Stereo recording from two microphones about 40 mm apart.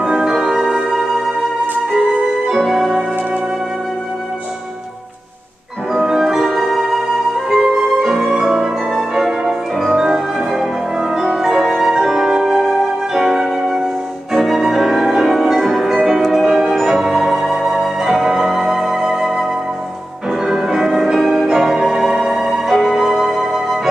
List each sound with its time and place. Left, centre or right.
0.0 s music: centre
0.8 s music: centre
2.5 s music: centre
6.0 s music: centre
7.4 s music: centre
14.3 s music: centre
16.4 s music: centre
20.4 s music: centre